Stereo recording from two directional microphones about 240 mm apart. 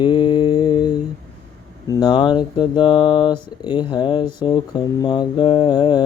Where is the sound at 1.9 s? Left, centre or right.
Centre.